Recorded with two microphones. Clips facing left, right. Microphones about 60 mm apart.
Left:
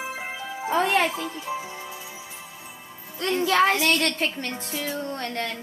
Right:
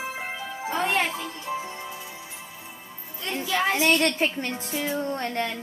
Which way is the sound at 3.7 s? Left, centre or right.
Centre.